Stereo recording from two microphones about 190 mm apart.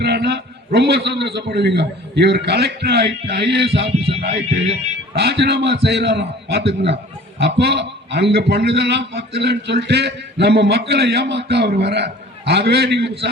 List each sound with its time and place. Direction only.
0.0 s a man's voice: 60° right (ahead or behind)
4.0 s a sound: 30° right (ahead or behind)
5.1 s a man's voice: 60° right (ahead or behind)